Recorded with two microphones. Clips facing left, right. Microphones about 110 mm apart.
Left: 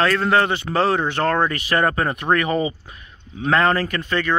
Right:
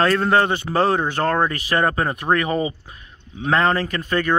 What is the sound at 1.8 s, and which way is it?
Speech, 20° right (ahead or behind).